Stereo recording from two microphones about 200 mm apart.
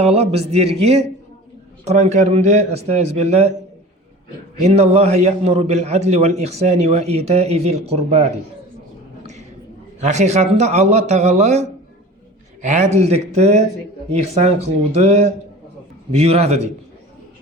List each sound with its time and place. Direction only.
0.0 s a man's voice: 30° right (ahead or behind)
4.6 s a man's voice: 30° right (ahead or behind)
10.0 s a man's voice: 35° right (ahead or behind)